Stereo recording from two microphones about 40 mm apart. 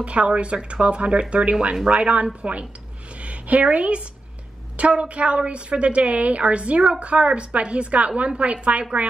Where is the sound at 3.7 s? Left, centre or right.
Right.